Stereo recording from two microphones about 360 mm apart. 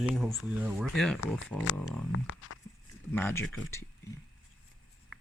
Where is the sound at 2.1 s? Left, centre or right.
Left.